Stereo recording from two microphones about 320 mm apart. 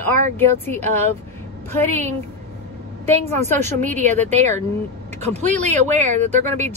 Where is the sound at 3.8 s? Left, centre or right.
Right.